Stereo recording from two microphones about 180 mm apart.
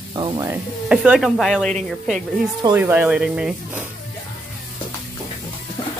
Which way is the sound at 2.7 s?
10° right (ahead or behind).